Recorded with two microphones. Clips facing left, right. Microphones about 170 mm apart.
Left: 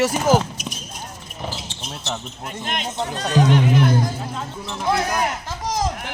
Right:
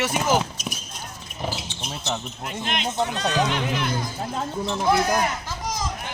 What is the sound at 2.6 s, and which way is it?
Speech, 45° left (ahead or behind).